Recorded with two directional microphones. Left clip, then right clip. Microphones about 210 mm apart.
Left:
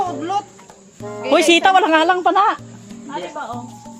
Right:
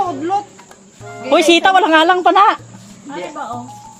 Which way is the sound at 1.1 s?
10° left (ahead or behind).